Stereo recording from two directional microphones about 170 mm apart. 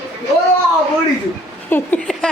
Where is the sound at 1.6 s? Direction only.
10° left (ahead or behind).